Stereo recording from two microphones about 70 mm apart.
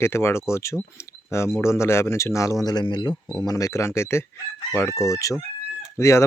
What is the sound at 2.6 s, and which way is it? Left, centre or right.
Speech, left.